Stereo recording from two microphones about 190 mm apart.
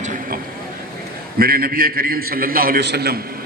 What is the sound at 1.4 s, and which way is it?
A man's voice, 50° right (ahead or behind).